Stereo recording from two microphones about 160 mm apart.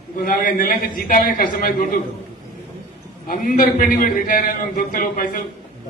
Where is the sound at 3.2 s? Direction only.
65° left (ahead or behind).